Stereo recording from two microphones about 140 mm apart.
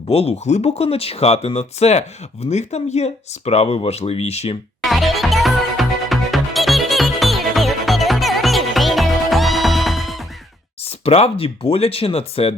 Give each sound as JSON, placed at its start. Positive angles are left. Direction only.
{"t": 0.1, "sound": "speech", "side_deg": 45}
{"t": 4.8, "sound": "music", "side_deg": 0}
{"t": 10.8, "sound": "speech", "side_deg": 45}